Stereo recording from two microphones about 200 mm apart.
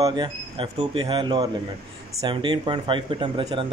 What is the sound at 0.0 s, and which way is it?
Speech, 20° right (ahead or behind).